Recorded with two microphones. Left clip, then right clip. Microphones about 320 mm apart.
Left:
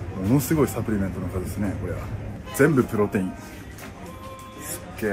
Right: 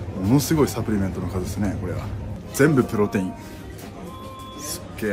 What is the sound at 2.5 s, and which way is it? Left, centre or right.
Speech, centre.